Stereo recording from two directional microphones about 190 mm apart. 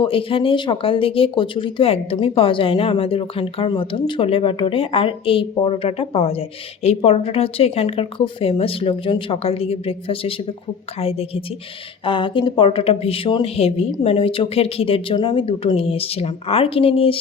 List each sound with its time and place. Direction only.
0.0 s a woman's voice: 30° left (ahead or behind)